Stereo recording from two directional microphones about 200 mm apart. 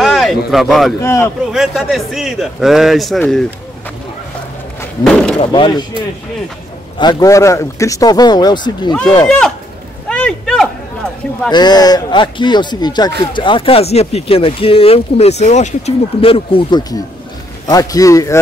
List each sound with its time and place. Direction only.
0.0 s a sound: centre (ahead or behind)
1.0 s a man's voice: 15° left (ahead or behind)
1.5 s a man's voice: centre (ahead or behind)
5.0 s a man's voice: 5° left (ahead or behind)
5.4 s speech: 25° left (ahead or behind)
7.0 s speech: 20° left (ahead or behind)
9.2 s a man's voice: 5° left (ahead or behind)
10.0 s a sound: 5° left (ahead or behind)
11.5 s a man's voice: 20° left (ahead or behind)